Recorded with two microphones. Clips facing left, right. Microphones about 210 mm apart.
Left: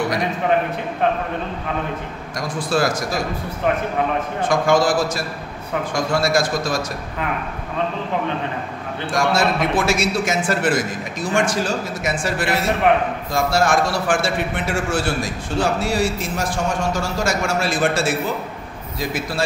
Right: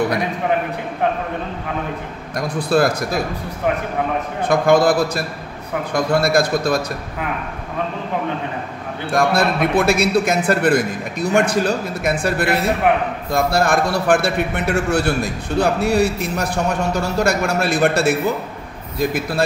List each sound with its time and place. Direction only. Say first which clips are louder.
2.3 s a man's voice: right 4 dB; 55° right (ahead or behind)
4.5 s a man's voice: right 3 dB; 60° right (ahead or behind)
9.1 s a man's voice: right 2 dB; 55° right (ahead or behind)